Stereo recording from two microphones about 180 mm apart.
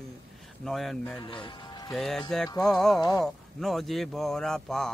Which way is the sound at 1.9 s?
Centre (ahead or behind).